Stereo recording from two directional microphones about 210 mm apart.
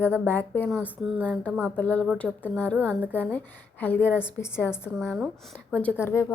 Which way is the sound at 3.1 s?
10° left (ahead or behind).